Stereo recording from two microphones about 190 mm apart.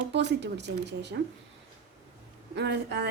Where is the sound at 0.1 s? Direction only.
65° right (ahead or behind).